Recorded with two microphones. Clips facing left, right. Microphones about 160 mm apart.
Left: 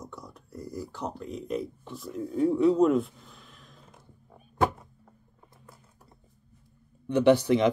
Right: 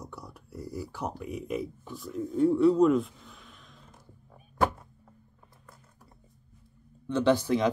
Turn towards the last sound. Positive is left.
turn(degrees=20)  # may be behind; listen again after turning